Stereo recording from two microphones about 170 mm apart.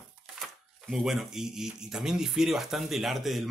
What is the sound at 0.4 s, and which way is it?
Speech, centre (ahead or behind).